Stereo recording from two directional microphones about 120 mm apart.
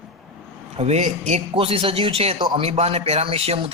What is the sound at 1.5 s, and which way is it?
Speech, 50° right (ahead or behind).